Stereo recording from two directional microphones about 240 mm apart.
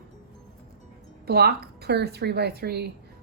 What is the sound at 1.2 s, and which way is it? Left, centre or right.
A woman's voice, right.